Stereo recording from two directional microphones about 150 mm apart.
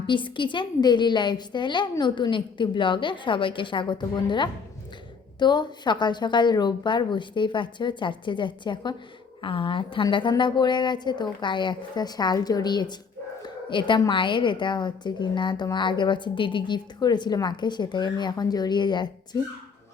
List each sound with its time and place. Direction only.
0.1 s a woman's voice: 35° left (ahead or behind)